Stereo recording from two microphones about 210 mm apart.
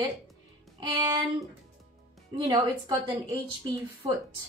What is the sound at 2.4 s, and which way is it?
Speech, 20° right (ahead or behind).